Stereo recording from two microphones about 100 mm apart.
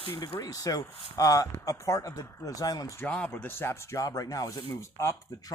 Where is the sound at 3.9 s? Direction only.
35° left (ahead or behind).